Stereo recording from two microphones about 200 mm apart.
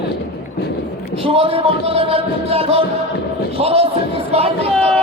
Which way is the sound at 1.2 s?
30° right (ahead or behind).